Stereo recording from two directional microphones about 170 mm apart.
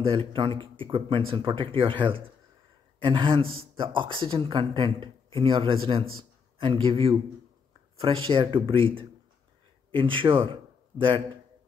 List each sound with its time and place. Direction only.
0.0 s a man's voice: 30° right (ahead or behind)